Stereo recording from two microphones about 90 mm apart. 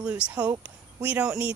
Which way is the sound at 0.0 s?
15° right (ahead or behind).